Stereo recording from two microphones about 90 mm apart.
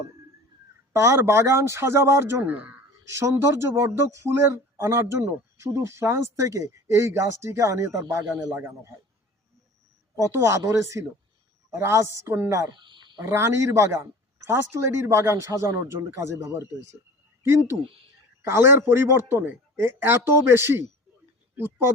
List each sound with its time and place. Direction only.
0.9 s a man's voice: 30° right (ahead or behind)
3.1 s a man's voice: 30° right (ahead or behind)
10.2 s speech: 35° right (ahead or behind)
12.7 s a sound: 60° right (ahead or behind)
13.2 s a man's voice: 30° right (ahead or behind)